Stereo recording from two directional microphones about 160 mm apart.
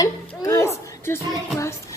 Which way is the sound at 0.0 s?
20° left (ahead or behind).